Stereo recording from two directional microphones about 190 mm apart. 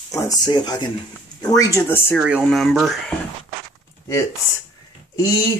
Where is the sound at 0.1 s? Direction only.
20° left (ahead or behind).